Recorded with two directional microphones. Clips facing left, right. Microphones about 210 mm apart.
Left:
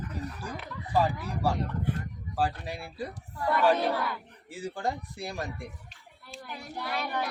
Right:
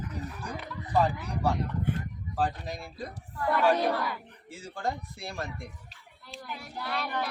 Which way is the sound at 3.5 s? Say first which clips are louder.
Even; 10° right (ahead or behind).